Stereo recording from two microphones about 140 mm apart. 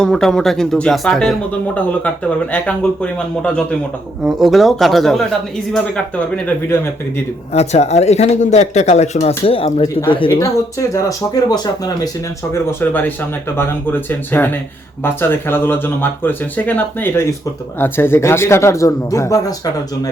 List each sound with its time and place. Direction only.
0.0 s speech: 5° left (ahead or behind)
4.2 s speech: 5° right (ahead or behind)
7.5 s speech: 50° left (ahead or behind)
10.4 s speech: 20° left (ahead or behind)
12.5 s speech: 15° left (ahead or behind)